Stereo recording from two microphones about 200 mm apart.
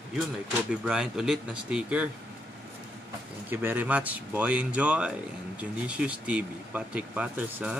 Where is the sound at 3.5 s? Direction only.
10° right (ahead or behind).